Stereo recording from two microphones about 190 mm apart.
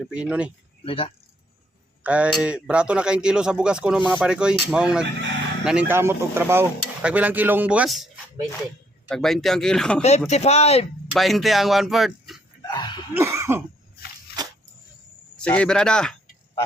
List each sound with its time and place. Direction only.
0.1 s speech: 5° right (ahead or behind)
0.9 s speech: 30° left (ahead or behind)
2.0 s speech: 5° right (ahead or behind)
10.0 s speech: 35° left (ahead or behind)
11.1 s speech: centre (ahead or behind)
12.6 s a sound: 25° left (ahead or behind)
13.1 s cough: 15° right (ahead or behind)
15.4 s speech: 5° left (ahead or behind)